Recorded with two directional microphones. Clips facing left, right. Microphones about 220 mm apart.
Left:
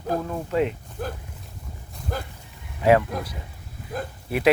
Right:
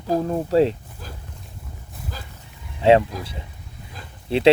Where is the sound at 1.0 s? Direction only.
60° left (ahead or behind).